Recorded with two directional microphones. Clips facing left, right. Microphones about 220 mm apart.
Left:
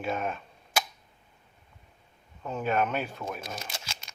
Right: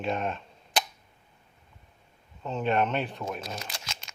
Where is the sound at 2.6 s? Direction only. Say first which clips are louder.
Right 2 dB; 5° left (ahead or behind).